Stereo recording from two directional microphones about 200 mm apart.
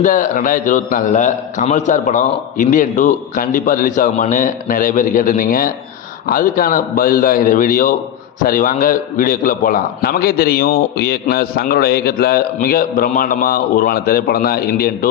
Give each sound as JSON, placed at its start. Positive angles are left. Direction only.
{"t": 0.0, "sound": "a man's voice", "side_deg": 40}